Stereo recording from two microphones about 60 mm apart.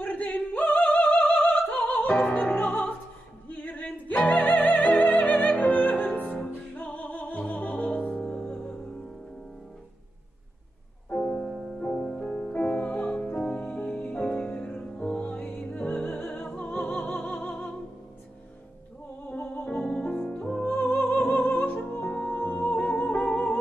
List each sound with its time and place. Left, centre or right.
0.0 s opera: left
2.3 s music: left
11.1 s music: centre
19.2 s music: left
19.7 s music: centre; by 22.0 s left
22.0 s music: centre